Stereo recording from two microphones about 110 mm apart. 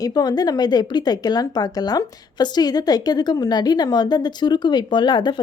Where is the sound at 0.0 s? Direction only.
40° left (ahead or behind).